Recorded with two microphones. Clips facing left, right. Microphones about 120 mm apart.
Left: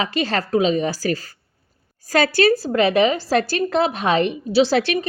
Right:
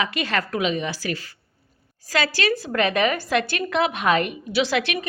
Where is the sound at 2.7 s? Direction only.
25° left (ahead or behind).